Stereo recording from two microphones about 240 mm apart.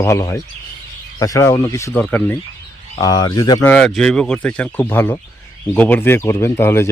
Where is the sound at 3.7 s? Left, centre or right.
Centre.